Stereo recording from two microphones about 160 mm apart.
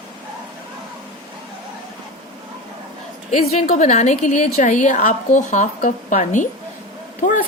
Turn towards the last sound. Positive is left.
turn(degrees=55)  # may be behind; listen again after turning